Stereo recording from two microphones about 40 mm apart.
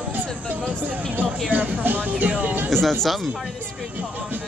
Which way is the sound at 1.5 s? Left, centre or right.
Right.